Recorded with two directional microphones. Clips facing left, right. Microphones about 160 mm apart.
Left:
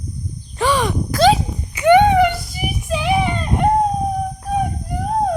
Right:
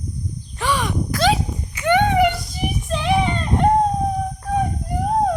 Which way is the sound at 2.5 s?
10° left (ahead or behind).